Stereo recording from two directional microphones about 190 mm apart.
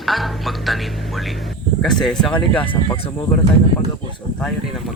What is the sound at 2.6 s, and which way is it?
Speech, 25° left (ahead or behind).